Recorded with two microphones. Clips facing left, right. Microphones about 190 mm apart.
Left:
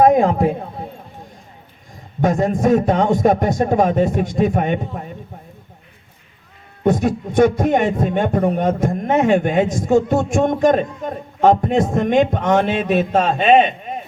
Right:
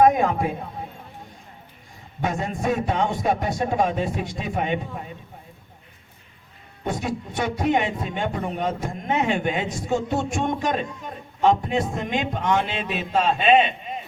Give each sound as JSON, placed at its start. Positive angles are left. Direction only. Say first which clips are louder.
{"t": 0.0, "sound": "a man's voice", "louder": "left 5 dB", "side_deg": 35}
{"t": 2.2, "sound": "speech", "louder": "left 9 dB", "side_deg": 40}
{"t": 6.8, "sound": "speech", "louder": "left 10 dB", "side_deg": 50}